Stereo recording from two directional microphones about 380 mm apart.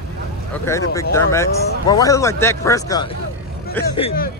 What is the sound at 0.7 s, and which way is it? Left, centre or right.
Speech, centre.